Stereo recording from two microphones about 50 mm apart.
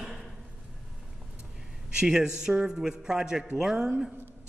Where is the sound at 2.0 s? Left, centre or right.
Centre.